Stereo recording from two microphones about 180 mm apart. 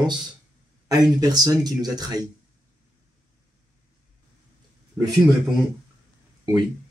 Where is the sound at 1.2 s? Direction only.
20° right (ahead or behind).